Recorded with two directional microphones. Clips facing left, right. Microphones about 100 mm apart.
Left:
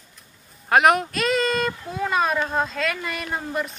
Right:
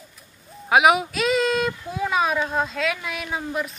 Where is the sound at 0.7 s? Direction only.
5° right (ahead or behind).